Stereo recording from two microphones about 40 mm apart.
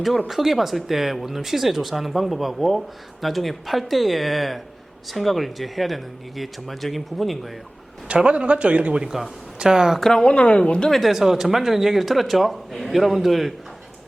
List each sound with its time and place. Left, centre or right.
0.3 s speech: centre
8.0 s a man's voice: right
9.0 s speech: centre
9.6 s speech: centre
10.0 s speech: centre
10.2 s a woman's voice: left
10.8 s speech: centre
11.1 s speech: centre